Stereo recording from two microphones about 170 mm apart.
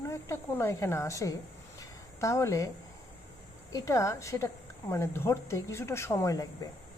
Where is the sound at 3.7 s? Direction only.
20° left (ahead or behind).